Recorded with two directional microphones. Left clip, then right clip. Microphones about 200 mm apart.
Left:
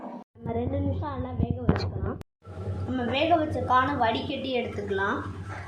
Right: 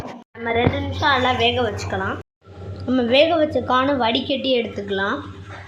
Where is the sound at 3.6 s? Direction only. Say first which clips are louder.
Right 5 dB; 50° right (ahead or behind).